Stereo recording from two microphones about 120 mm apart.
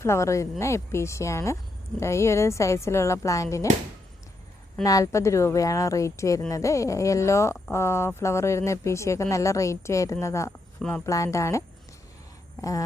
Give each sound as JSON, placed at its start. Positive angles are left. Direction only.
{"t": 0.0, "sound": "speech", "side_deg": 25}
{"t": 4.8, "sound": "speech", "side_deg": 30}
{"t": 10.8, "sound": "speech", "side_deg": 5}
{"t": 11.0, "sound": "speech", "side_deg": 25}